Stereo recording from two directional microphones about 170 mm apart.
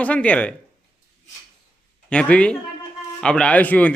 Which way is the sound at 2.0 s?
5° left (ahead or behind).